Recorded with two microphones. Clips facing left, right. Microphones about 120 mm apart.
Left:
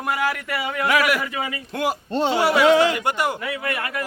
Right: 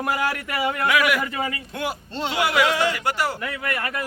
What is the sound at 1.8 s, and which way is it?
Speech, 45° left (ahead or behind).